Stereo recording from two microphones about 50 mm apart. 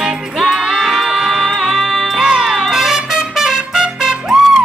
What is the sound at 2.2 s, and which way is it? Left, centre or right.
Music, centre.